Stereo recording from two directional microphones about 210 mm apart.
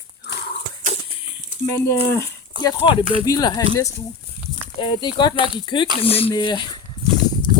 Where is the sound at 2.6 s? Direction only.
20° left (ahead or behind).